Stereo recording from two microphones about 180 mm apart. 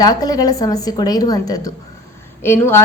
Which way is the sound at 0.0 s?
20° left (ahead or behind).